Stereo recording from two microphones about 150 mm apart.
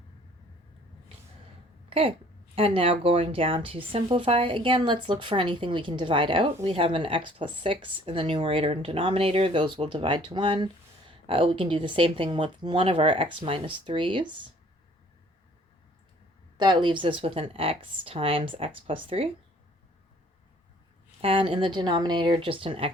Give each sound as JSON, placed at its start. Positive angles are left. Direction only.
{"t": 1.9, "sound": "speech", "side_deg": -35}
{"t": 16.6, "sound": "speech", "side_deg": -30}
{"t": 21.2, "sound": "speech", "side_deg": -40}